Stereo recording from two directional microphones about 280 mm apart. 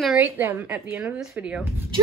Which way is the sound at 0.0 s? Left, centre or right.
Centre.